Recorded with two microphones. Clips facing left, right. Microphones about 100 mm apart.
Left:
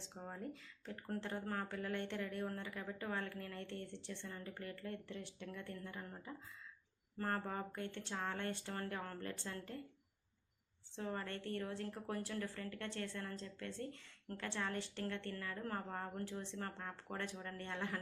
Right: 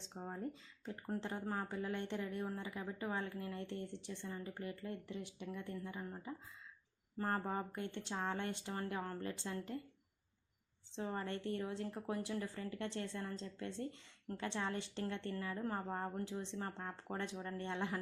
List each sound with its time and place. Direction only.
0.2 s speech: 20° right (ahead or behind)
10.9 s speech: 20° right (ahead or behind)